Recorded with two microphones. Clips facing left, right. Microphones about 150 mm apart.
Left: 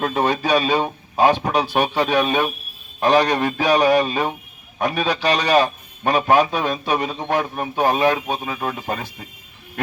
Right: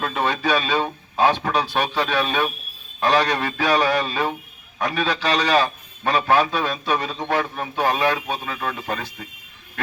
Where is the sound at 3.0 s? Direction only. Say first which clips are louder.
Left 3 dB; 45° left (ahead or behind).